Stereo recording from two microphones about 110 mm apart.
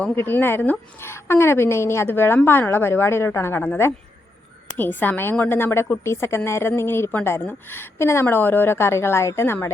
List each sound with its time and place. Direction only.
0.2 s a woman's voice: 20° left (ahead or behind)